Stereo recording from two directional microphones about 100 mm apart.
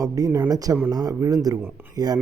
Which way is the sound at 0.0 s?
35° right (ahead or behind).